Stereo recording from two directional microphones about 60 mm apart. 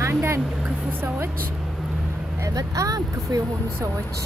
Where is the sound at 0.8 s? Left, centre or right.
Right.